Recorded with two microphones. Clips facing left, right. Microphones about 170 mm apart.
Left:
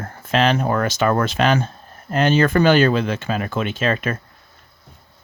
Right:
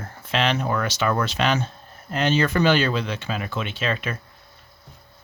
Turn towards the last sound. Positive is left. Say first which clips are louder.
# left 6 dB
turn(degrees=50)  # may be behind; listen again after turning